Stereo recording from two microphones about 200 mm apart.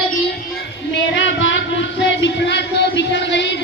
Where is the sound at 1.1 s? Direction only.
65° left (ahead or behind).